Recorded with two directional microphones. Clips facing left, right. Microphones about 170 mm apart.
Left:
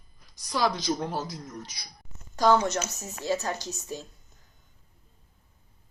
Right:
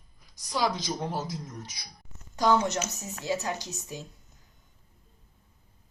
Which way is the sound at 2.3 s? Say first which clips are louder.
Left 2 dB; 15° right (ahead or behind).